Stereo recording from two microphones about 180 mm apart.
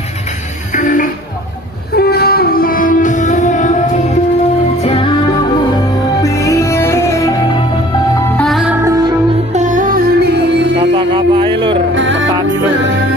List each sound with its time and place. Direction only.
0.7 s music: 45° left (ahead or behind)
2.0 s music: 60° left (ahead or behind); by 4.2 s 45° left (ahead or behind)
4.8 s music: 30° left (ahead or behind)
6.2 s music: 15° left (ahead or behind)
8.4 s music: centre (ahead or behind)
8.8 s music: 20° right (ahead or behind)
9.5 s music: 45° right (ahead or behind); by 10.7 s 65° right (ahead or behind)
10.8 s a sound: 30° right (ahead or behind)
11.9 s music: 90° right